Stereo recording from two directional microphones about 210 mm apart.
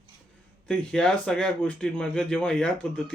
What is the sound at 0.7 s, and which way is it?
Speech, 5° left (ahead or behind).